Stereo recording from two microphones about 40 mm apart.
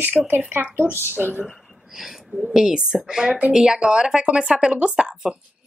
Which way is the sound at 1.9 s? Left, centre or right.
Centre.